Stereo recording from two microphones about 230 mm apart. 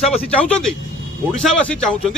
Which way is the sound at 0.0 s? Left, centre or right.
Centre.